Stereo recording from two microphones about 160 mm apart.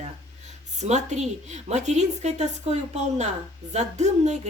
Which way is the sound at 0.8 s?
45° right (ahead or behind).